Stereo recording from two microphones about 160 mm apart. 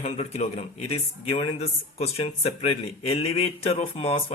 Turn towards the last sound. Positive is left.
turn(degrees=40)  # may be behind; listen again after turning